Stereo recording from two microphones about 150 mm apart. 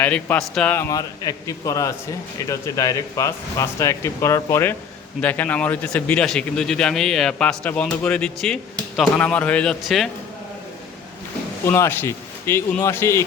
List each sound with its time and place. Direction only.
0.0 s a man's voice: 10° left (ahead or behind)
11.6 s a man's voice: 15° left (ahead or behind)